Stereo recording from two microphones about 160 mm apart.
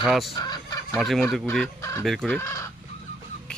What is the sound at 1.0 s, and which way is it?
Speech, centre (ahead or behind).